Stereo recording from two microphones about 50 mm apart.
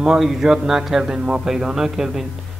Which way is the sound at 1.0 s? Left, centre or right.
Centre.